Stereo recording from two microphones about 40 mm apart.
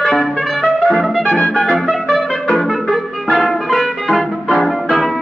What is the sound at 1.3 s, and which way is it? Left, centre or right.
Music, left.